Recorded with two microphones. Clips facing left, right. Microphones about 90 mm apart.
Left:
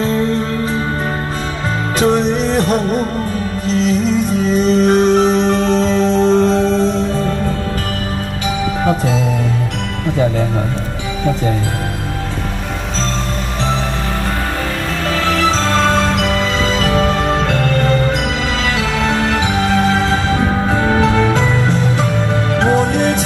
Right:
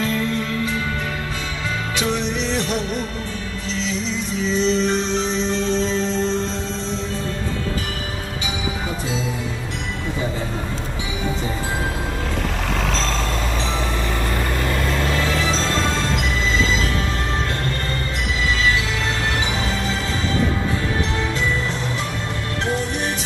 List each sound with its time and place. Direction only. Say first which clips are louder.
0.0 s music: left 6 dB; 35° left (ahead or behind)
2.0 s music: left 10 dB; 40° left (ahead or behind)
15.1 s music: left 6 dB; 80° left
18.6 s music: left 4 dB; 75° left (ahead or behind)